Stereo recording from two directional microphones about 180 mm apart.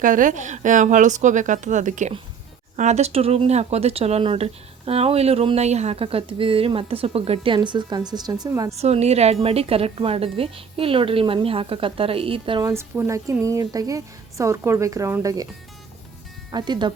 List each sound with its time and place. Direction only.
0.0 s speech: 50° right (ahead or behind); by 8.7 s 20° right (ahead or behind)
8.7 s a woman's voice: 35° right (ahead or behind); by 15.4 s 20° right (ahead or behind)
16.5 s speech: 25° right (ahead or behind)